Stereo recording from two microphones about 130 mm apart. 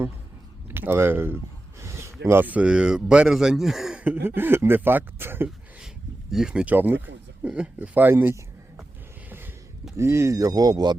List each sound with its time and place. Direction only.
0.7 s speech: 15° right (ahead or behind)
6.3 s speech: 5° right (ahead or behind)
10.0 s speech: 20° right (ahead or behind)